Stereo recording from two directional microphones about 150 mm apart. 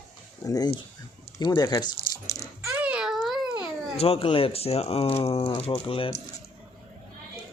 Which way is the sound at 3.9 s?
40° left (ahead or behind).